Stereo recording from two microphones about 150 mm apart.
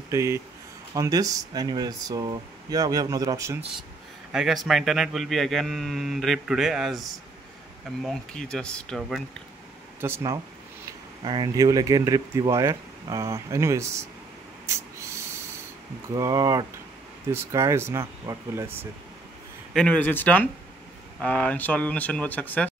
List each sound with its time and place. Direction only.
0.1 s speech: 20° right (ahead or behind)
4.3 s a man's voice: centre (ahead or behind)
9.9 s speech: 15° right (ahead or behind)
16.1 s speech: 20° right (ahead or behind)
19.7 s speech: 5° left (ahead or behind)